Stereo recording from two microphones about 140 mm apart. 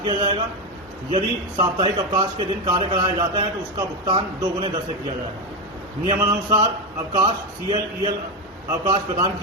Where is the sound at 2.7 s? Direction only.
35° right (ahead or behind).